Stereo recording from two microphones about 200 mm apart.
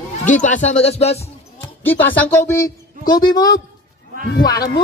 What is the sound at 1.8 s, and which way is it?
Speech, 10° left (ahead or behind).